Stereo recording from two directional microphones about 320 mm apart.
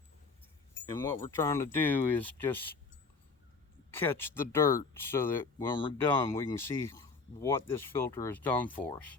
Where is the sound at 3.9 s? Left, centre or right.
Centre.